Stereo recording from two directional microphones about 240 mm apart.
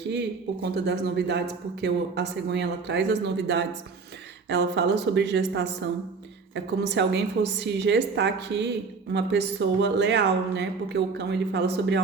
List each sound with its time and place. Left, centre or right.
0.6 s speech: right